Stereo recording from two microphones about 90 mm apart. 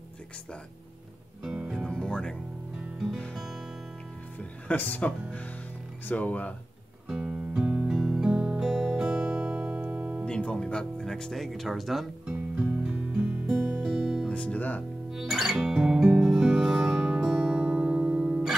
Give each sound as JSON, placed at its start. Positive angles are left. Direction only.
{"t": 1.4, "sound": "music", "side_deg": -5}
{"t": 1.9, "sound": "music", "side_deg": 10}
{"t": 2.7, "sound": "music", "side_deg": -5}
{"t": 4.4, "sound": "speech", "side_deg": 20}
{"t": 7.1, "sound": "music", "side_deg": -10}
{"t": 10.2, "sound": "speech", "side_deg": 10}
{"t": 12.4, "sound": "music", "side_deg": -15}
{"t": 14.3, "sound": "music", "side_deg": 15}
{"t": 15.0, "sound": "music", "side_deg": -5}